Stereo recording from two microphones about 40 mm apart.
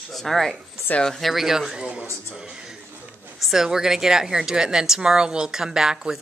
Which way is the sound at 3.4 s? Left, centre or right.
Centre.